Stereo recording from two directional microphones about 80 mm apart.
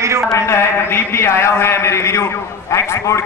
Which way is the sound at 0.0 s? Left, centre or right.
Right.